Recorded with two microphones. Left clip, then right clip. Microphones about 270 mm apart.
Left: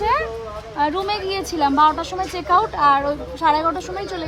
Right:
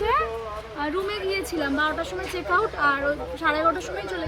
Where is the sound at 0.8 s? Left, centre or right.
Centre.